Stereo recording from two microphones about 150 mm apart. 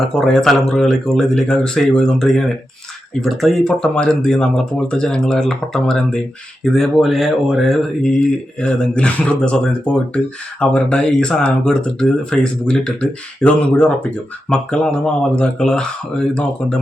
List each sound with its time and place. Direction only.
0.0 s speech: 5° left (ahead or behind)